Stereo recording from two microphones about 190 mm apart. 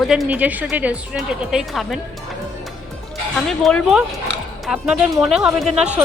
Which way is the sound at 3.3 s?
Centre (ahead or behind).